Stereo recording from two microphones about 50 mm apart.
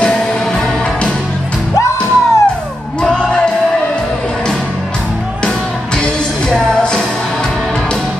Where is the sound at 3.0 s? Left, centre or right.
Centre.